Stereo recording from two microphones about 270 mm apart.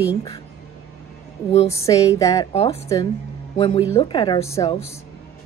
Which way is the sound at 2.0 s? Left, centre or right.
Centre.